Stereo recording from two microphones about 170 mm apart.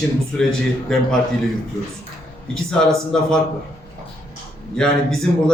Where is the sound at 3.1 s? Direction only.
5° left (ahead or behind).